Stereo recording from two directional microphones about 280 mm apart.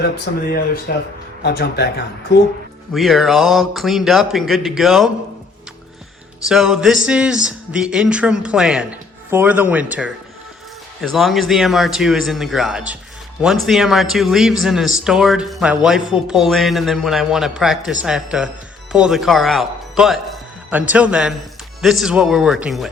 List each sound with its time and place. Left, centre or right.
0.3 s speech: left
2.9 s speech: centre
6.5 s a man's voice: centre